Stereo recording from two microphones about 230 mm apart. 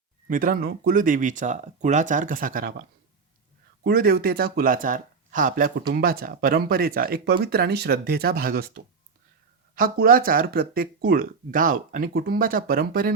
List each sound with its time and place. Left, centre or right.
0.3 s speech: right
3.8 s speech: right